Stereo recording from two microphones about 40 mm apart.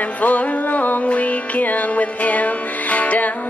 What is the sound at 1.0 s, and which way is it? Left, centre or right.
Music, left.